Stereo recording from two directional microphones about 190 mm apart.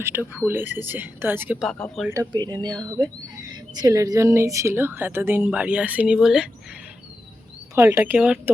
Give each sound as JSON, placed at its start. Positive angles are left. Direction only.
{"t": 0.0, "sound": "a woman's voice", "side_deg": -10}
{"t": 1.6, "sound": "speech", "side_deg": 0}
{"t": 2.0, "sound": "a woman's voice", "side_deg": -20}
{"t": 7.8, "sound": "a woman's voice", "side_deg": -10}